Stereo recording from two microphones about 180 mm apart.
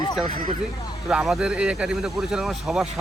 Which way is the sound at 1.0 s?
5° right (ahead or behind).